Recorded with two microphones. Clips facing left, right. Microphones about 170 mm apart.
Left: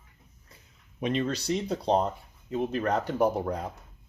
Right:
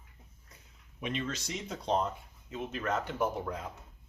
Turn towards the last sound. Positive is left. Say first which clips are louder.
# left 7 dB
turn(degrees=40)  # may be behind; listen again after turning